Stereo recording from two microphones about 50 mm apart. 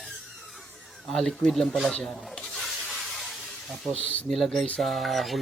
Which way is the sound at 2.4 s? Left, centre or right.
Centre.